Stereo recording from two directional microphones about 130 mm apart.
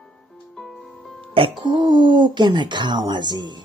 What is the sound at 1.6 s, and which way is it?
Speech, 40° right (ahead or behind).